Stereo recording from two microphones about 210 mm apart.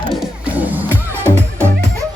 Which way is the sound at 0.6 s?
10° right (ahead or behind).